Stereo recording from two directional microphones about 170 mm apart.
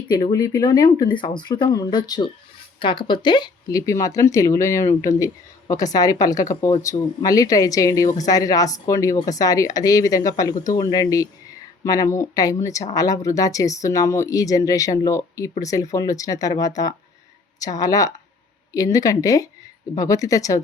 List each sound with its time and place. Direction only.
0.1 s speech: 20° left (ahead or behind)